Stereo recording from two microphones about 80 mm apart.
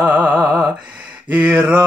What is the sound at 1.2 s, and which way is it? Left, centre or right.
Mantra, centre.